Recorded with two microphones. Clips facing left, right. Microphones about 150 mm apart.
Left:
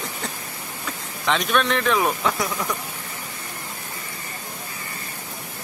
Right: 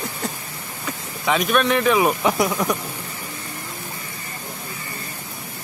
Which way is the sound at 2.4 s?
20° right (ahead or behind).